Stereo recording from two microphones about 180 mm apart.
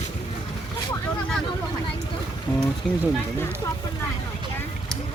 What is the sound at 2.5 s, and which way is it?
Speech, 5° left (ahead or behind).